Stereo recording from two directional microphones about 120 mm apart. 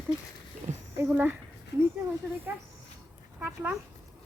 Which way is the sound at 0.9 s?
15° right (ahead or behind).